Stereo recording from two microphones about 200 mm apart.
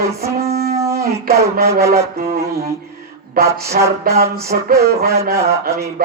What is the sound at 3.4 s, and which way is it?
Speech, 50° right (ahead or behind).